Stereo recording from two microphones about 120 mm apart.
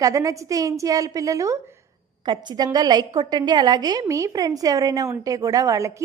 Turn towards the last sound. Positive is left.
turn(degrees=-25)  # may be behind; listen again after turning